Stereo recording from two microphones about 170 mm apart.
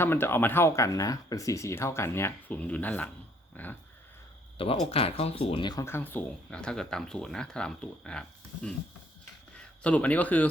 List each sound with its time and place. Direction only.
0.0 s speech: 15° left (ahead or behind)
3.6 s a sound: 10° left (ahead or behind)
4.5 s speech: 35° left (ahead or behind)
5.8 s speech: 10° left (ahead or behind)
9.8 s speech: 10° left (ahead or behind)